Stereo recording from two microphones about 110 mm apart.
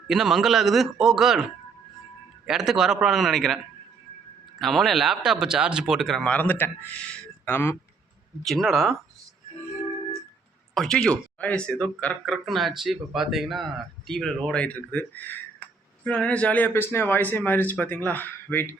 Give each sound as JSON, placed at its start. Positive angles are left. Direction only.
{"t": 0.1, "sound": "speech", "side_deg": -5}
{"t": 2.5, "sound": "speech", "side_deg": -5}
{"t": 6.2, "sound": "speech", "side_deg": 15}
{"t": 7.1, "sound": "a sound", "side_deg": 15}
{"t": 8.4, "sound": "speech", "side_deg": 0}
{"t": 10.8, "sound": "speech", "side_deg": 5}